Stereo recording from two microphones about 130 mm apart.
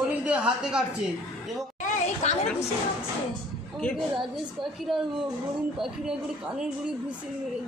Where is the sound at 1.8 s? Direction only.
55° left (ahead or behind).